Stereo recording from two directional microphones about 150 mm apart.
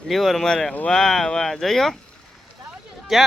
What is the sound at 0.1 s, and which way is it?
Speech, centre (ahead or behind).